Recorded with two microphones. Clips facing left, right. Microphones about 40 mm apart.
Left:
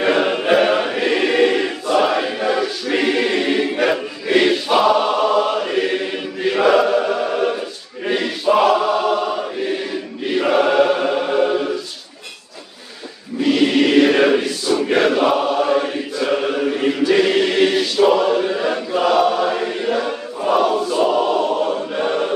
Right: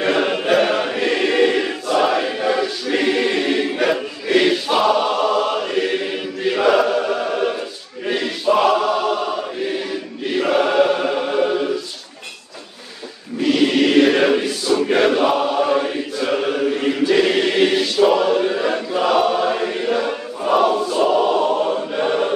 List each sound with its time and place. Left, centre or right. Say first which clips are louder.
0.0 s choir: left 1 dB; centre
8.1 s chant: left 1 dB; centre
10.3 s choir: left 1 dB; centre
13.4 s choir: left 1 dB; centre
19.1 s chant: even; centre